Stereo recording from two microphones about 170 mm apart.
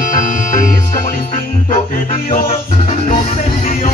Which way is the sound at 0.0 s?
50° left (ahead or behind).